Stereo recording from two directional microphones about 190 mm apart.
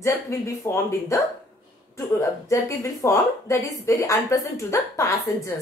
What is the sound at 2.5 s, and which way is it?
Speech, 15° left (ahead or behind).